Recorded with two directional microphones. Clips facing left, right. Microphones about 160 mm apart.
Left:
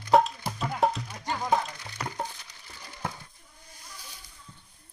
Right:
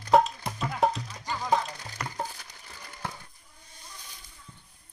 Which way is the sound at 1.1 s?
25° left (ahead or behind).